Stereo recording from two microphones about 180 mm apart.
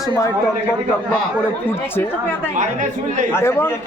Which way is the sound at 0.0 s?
15° left (ahead or behind).